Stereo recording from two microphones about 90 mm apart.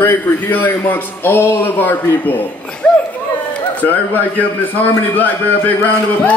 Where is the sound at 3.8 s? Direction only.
20° left (ahead or behind).